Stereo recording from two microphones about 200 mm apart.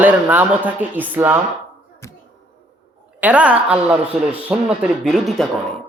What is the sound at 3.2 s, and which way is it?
A man's voice, 5° right (ahead or behind).